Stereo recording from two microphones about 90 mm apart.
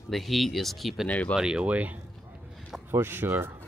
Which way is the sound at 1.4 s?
10° right (ahead or behind).